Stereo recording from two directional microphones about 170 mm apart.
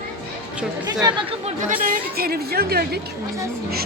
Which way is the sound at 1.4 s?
50° right (ahead or behind).